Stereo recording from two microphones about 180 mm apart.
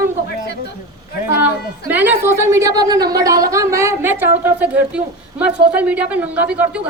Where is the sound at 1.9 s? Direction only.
10° right (ahead or behind).